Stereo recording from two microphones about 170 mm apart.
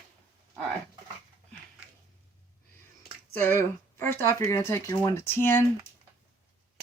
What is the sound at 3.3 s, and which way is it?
Speech, 15° left (ahead or behind).